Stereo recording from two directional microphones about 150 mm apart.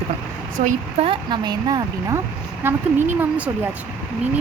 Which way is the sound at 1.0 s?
30° right (ahead or behind).